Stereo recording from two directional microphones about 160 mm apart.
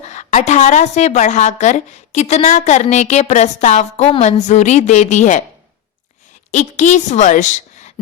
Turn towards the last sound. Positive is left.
turn(degrees=45)  # may be behind; listen again after turning